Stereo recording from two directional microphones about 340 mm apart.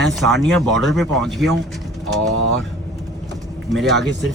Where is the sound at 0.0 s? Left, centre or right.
Centre.